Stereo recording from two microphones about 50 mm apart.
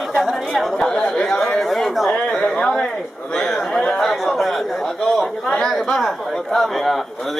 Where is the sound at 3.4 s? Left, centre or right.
Centre.